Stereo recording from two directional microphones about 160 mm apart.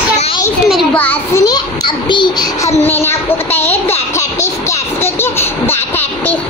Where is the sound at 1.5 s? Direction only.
30° left (ahead or behind).